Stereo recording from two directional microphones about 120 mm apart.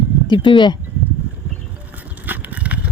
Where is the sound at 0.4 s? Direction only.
40° left (ahead or behind).